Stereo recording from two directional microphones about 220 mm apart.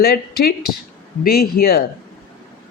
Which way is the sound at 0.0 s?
45° left (ahead or behind).